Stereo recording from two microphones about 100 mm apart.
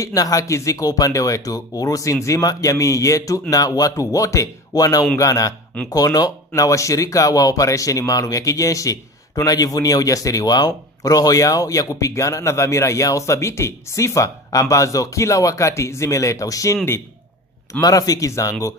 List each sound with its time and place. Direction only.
0.0 s speech: 35° left (ahead or behind)
17.7 s speech: 35° left (ahead or behind)